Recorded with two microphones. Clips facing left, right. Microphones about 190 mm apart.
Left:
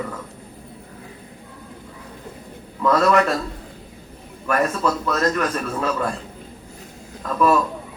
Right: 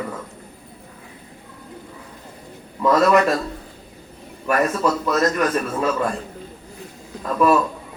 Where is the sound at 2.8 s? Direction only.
15° right (ahead or behind).